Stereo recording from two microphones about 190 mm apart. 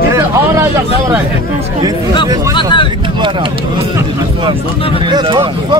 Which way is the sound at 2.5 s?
25° left (ahead or behind).